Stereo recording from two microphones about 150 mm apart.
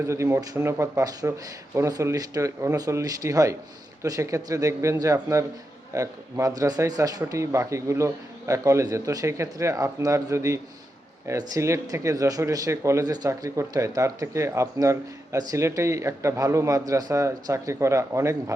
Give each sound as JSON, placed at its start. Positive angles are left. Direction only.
{"t": 0.0, "sound": "speech", "side_deg": -20}